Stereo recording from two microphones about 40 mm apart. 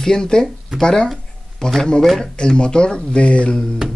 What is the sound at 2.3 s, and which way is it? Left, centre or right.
Speech, left.